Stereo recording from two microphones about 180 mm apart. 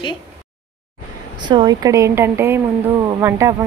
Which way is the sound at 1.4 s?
25° right (ahead or behind).